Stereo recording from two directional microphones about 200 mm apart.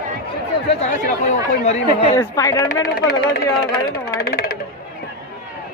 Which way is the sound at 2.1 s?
15° left (ahead or behind).